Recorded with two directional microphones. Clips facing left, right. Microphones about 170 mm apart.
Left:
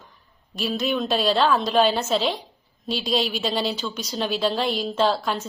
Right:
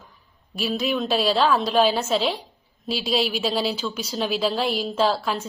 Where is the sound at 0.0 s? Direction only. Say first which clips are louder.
Even; 5° right (ahead or behind).